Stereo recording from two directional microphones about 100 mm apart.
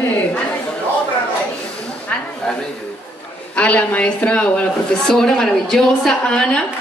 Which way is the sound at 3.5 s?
15° left (ahead or behind).